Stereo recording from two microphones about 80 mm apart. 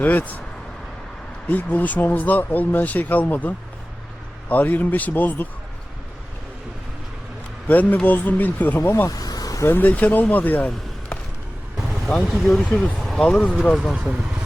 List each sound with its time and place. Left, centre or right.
0.0 s speech: left
1.5 s speech: centre
7.7 s speech: centre
9.0 s vehicle: left
9.6 s speech: left
11.9 s speech: centre
13.9 s speech: centre